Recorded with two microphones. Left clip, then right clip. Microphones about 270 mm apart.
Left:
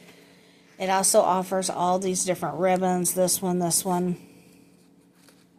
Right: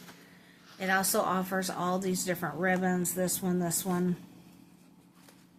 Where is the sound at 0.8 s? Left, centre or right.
Centre.